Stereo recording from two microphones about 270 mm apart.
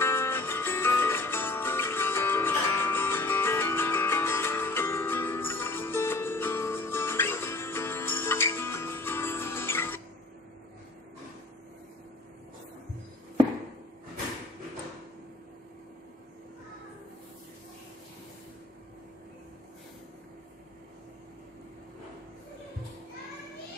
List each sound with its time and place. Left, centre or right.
0.0 s music: centre